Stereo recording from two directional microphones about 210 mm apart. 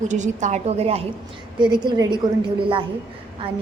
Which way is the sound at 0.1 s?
35° right (ahead or behind).